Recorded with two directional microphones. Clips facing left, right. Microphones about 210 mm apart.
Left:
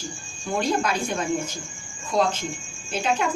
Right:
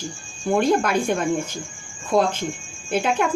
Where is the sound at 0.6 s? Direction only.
55° right (ahead or behind).